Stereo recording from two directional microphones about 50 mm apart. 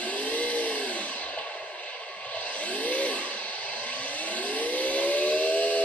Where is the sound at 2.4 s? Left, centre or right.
Left.